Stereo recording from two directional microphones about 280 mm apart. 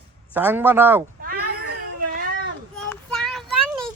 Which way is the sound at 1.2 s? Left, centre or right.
Right.